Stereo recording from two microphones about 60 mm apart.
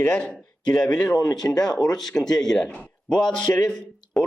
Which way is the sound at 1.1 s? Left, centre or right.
Left.